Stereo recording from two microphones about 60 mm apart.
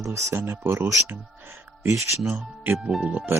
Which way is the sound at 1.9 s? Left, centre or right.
Right.